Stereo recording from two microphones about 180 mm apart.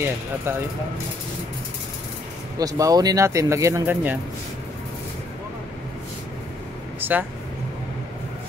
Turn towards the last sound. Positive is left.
turn(degrees=-10)  # may be behind; listen again after turning